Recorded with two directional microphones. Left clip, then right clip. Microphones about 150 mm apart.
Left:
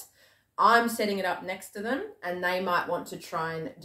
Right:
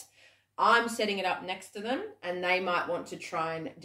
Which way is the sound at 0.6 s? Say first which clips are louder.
Left 3 dB; centre (ahead or behind).